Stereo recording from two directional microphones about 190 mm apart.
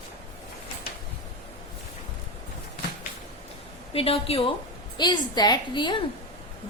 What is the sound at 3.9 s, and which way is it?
A woman's voice, 30° left (ahead or behind).